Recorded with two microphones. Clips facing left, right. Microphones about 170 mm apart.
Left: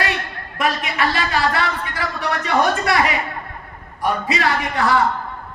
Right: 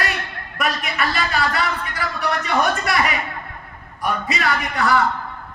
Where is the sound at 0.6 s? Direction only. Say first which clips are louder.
Left 3 dB; 25° left (ahead or behind).